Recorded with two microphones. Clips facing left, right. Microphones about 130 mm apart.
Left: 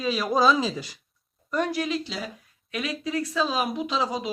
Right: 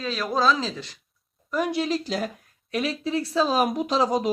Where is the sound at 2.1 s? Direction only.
50° right (ahead or behind).